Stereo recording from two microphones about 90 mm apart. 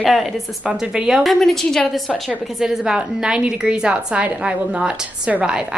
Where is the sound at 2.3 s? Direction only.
5° right (ahead or behind).